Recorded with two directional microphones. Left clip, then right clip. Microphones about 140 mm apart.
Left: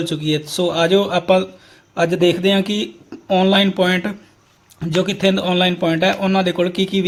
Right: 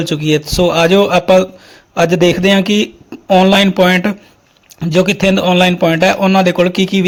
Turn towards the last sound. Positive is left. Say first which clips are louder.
# right 6 dB
turn(degrees=-35)  # may be behind; listen again after turning